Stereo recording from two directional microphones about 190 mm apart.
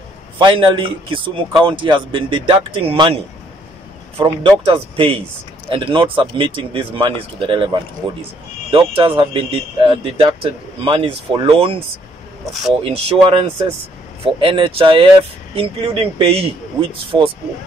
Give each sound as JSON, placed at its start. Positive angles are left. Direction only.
{"t": 0.4, "sound": "speech", "side_deg": -25}
{"t": 4.2, "sound": "speech", "side_deg": -25}
{"t": 8.7, "sound": "speech", "side_deg": -25}
{"t": 12.8, "sound": "speech", "side_deg": -30}